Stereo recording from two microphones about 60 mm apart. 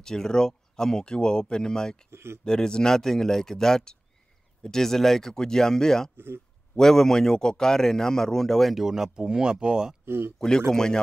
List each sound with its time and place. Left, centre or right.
0.0 s a man's voice: centre
2.0 s speech: right
2.4 s a man's voice: centre
6.1 s speech: right
6.7 s a man's voice: centre
8.8 s speech: centre
10.0 s speech: right
10.7 s a man's voice: centre